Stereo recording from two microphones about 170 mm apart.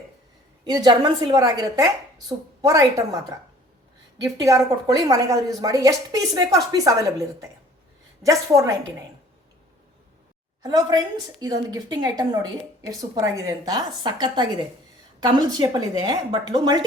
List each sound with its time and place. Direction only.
0.6 s a woman's voice: 25° right (ahead or behind)
4.2 s a woman's voice: 20° right (ahead or behind)
10.6 s a woman's voice: 25° right (ahead or behind)